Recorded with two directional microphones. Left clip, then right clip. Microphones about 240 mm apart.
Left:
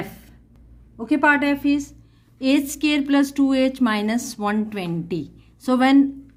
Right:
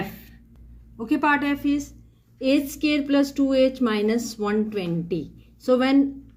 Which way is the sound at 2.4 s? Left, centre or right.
Left.